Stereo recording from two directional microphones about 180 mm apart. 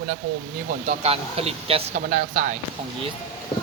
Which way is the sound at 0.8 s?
35° right (ahead or behind).